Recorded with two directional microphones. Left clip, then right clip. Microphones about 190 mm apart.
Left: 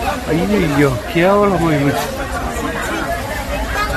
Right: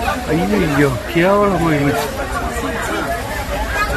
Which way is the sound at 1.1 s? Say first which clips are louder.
Left 1 dB; 10° left (ahead or behind).